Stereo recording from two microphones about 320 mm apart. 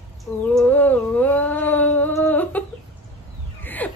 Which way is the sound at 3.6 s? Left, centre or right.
Centre.